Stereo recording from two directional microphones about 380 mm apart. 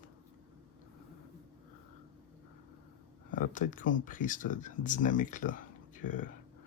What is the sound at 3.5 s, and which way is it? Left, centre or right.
Speech, left.